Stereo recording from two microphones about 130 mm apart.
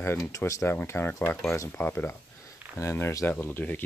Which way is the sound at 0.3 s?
25° left (ahead or behind).